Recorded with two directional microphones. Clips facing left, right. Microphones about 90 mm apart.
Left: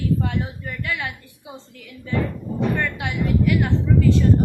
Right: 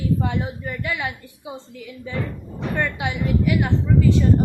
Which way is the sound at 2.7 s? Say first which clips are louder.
Right 1 dB; 15° right (ahead or behind).